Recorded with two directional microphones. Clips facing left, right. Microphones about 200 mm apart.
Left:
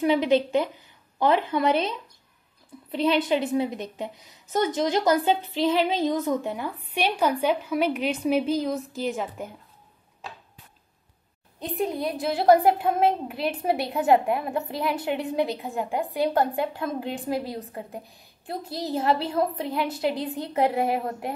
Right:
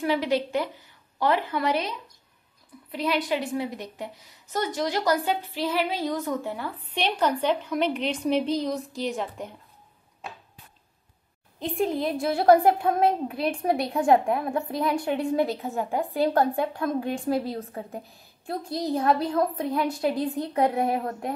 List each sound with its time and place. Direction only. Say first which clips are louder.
0.0 s a woman's voice: left 4 dB; 20° left (ahead or behind); by 9.6 s 5° left (ahead or behind)
11.6 s a woman's voice: right 1 dB; centre (ahead or behind)